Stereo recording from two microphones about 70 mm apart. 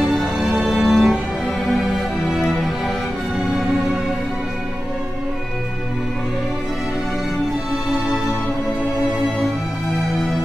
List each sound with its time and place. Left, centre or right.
0.1 s music: centre